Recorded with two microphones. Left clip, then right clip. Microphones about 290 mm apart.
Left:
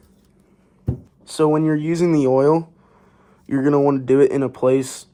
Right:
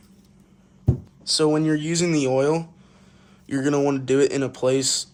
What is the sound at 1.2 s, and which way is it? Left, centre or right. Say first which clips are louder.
Speech: left 3 dB; centre.